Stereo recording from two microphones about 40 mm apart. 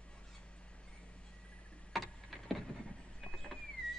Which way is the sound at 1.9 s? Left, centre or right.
Centre.